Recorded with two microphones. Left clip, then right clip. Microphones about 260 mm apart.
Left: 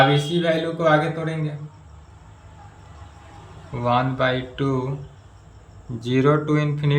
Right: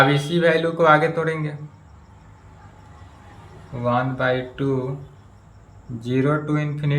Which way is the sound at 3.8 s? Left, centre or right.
Centre.